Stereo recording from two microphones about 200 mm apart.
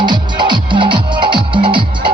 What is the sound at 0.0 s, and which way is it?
Music, 20° right (ahead or behind).